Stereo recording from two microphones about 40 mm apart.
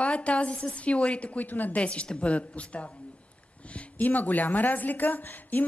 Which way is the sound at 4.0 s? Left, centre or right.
Left.